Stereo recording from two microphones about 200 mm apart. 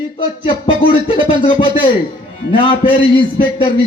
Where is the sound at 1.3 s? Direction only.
25° left (ahead or behind).